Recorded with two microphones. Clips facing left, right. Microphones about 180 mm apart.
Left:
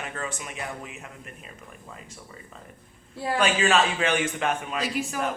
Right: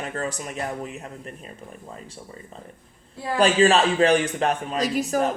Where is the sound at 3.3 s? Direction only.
35° right (ahead or behind).